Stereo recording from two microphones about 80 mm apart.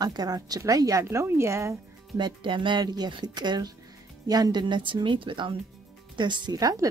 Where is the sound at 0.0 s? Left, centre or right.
Right.